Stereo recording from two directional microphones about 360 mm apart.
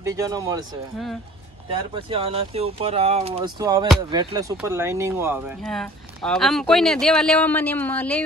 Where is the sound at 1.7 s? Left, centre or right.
Centre.